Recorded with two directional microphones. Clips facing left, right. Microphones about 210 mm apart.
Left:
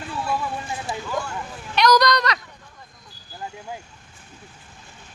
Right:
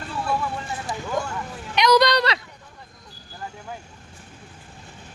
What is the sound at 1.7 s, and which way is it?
Speech, 25° right (ahead or behind).